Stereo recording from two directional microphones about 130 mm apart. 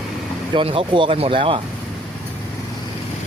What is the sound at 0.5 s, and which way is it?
Speech, 40° right (ahead or behind).